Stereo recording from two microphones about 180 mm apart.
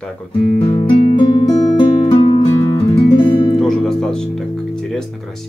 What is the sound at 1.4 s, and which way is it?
Music, 25° left (ahead or behind).